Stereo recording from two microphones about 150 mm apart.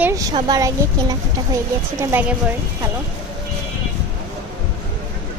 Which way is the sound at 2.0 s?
15° right (ahead or behind).